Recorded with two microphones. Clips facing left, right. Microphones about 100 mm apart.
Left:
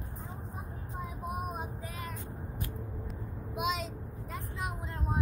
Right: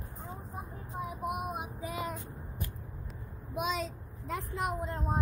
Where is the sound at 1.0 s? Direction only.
15° right (ahead or behind).